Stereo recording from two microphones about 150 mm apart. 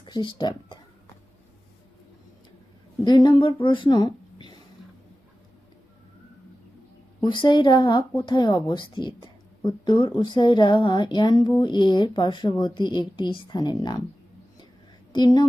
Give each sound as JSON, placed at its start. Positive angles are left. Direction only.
{"t": 0.0, "sound": "speech", "side_deg": 30}
{"t": 3.0, "sound": "speech", "side_deg": 30}
{"t": 7.3, "sound": "speech", "side_deg": 30}
{"t": 15.1, "sound": "a woman's voice", "side_deg": 30}